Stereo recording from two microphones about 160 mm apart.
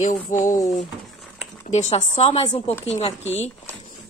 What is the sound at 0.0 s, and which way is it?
Speech, 50° left (ahead or behind).